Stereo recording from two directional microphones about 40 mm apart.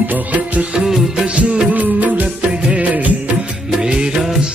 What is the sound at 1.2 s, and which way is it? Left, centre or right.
Music, right.